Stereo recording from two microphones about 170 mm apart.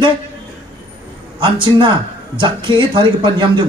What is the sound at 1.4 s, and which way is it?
A man's voice, 30° right (ahead or behind).